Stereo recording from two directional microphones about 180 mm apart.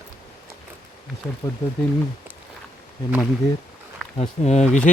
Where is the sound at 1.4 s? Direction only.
15° left (ahead or behind).